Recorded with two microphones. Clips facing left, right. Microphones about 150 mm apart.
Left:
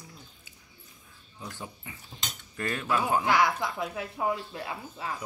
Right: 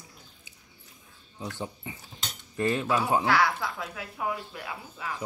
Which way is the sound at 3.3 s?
20° left (ahead or behind).